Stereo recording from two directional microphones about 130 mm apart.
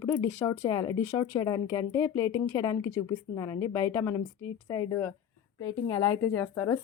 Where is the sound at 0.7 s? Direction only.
30° left (ahead or behind).